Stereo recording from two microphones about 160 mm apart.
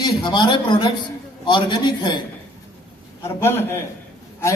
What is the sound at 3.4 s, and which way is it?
Speech, 15° left (ahead or behind).